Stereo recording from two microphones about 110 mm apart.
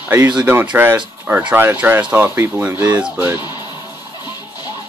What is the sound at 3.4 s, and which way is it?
Music, 40° left (ahead or behind).